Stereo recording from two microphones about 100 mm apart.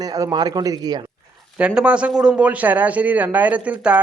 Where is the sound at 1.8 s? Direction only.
10° right (ahead or behind).